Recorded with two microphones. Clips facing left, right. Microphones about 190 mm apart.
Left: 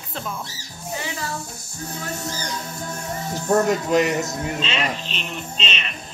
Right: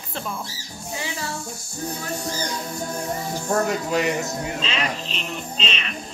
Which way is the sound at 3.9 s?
20° left (ahead or behind).